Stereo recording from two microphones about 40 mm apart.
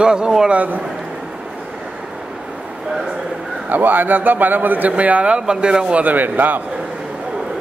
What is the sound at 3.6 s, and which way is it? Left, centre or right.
A man's voice, right.